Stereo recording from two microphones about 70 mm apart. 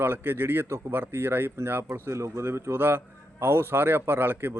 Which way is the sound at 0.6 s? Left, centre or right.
Right.